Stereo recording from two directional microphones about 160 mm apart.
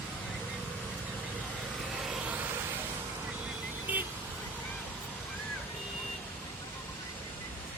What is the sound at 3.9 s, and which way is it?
Vehicle, 10° right (ahead or behind).